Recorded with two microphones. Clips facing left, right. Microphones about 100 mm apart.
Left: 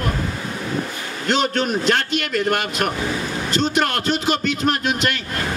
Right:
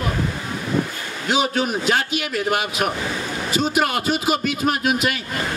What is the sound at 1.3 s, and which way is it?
A man's voice, 5° right (ahead or behind).